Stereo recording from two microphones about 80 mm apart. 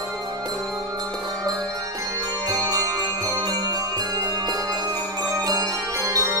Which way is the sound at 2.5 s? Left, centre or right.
Right.